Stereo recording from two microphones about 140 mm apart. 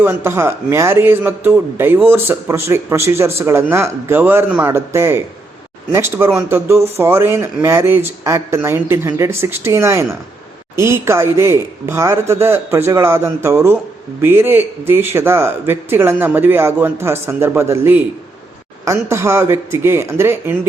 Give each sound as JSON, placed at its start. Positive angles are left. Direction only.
{"t": 0.0, "sound": "a man's voice", "side_deg": -20}